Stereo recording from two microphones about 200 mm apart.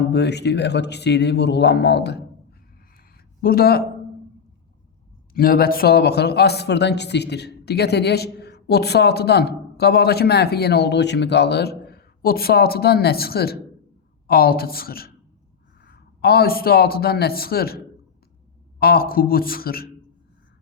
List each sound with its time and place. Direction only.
0.1 s speech: 55° left (ahead or behind)
3.4 s speech: 50° left (ahead or behind)
5.3 s a man's voice: 45° left (ahead or behind)
18.8 s speech: 50° left (ahead or behind)